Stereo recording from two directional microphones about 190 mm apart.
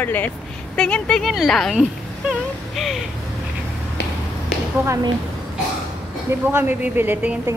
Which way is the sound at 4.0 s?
65° left (ahead or behind).